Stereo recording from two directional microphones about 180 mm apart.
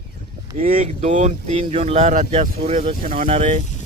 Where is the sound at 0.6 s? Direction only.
50° right (ahead or behind).